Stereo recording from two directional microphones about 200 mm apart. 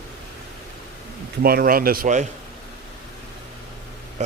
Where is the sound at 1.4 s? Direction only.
50° right (ahead or behind).